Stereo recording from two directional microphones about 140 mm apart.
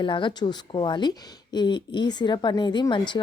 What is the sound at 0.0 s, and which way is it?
Speech, 35° left (ahead or behind).